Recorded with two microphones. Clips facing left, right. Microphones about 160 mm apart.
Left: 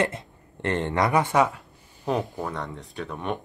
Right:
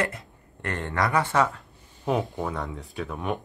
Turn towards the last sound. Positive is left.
turn(degrees=0)  # may be behind; listen again after turning